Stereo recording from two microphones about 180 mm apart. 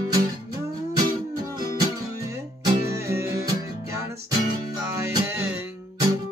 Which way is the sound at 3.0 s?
15° right (ahead or behind).